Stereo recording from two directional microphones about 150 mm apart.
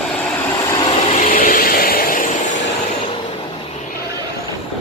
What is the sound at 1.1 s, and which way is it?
Vehicle, 55° left (ahead or behind).